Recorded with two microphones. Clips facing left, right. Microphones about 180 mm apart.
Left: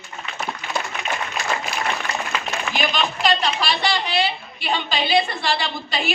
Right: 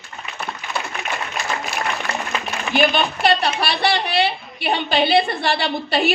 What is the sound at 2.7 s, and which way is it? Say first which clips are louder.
A woman's voice: right 7 dB; 60° right (ahead or behind).